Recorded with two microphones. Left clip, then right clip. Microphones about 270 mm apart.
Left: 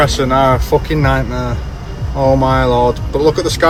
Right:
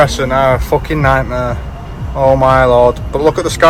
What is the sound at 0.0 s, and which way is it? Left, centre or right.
Speech, centre.